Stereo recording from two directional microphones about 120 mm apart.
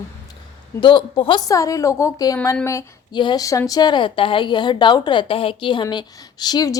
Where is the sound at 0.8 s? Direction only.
45° left (ahead or behind).